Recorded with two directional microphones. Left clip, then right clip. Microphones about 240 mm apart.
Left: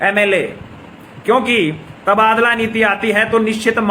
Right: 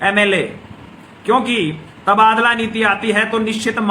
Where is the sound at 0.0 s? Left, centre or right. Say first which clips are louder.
Left 1 dB; centre.